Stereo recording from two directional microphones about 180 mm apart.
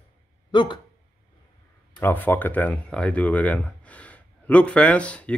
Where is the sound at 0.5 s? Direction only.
25° left (ahead or behind).